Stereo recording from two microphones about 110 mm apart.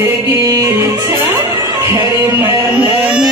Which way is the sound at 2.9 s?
15° right (ahead or behind).